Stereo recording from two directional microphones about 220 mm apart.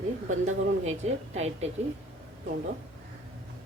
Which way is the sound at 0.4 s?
30° right (ahead or behind).